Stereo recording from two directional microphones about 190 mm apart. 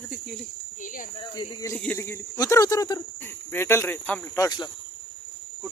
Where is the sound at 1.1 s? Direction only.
25° left (ahead or behind).